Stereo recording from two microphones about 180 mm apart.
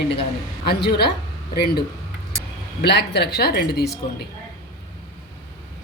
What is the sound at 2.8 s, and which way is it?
Speech, 70° left (ahead or behind).